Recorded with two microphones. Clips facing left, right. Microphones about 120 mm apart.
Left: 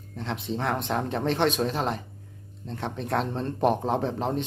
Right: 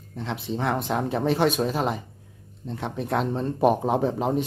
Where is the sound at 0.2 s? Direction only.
Centre (ahead or behind).